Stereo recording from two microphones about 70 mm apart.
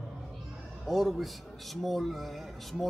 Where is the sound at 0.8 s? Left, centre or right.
Centre.